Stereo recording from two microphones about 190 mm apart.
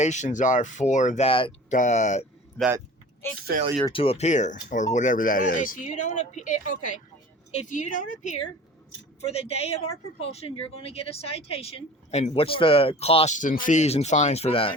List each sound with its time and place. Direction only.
0.0 s speech: 40° left (ahead or behind)
1.7 s speech: 40° left (ahead or behind)
3.2 s speech: 10° left (ahead or behind)
3.8 s speech: 30° left (ahead or behind)
9.2 s speech: 30° left (ahead or behind)